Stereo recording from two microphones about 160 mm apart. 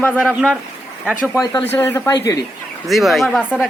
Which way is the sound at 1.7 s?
15° left (ahead or behind).